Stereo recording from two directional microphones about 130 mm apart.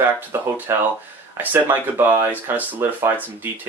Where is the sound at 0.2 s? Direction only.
15° right (ahead or behind).